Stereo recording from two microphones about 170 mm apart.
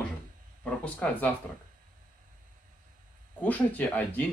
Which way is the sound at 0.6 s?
5° left (ahead or behind).